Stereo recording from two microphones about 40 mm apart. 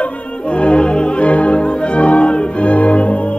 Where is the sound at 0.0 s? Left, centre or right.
Left.